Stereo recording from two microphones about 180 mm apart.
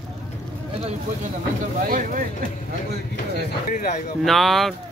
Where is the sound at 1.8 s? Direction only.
50° right (ahead or behind).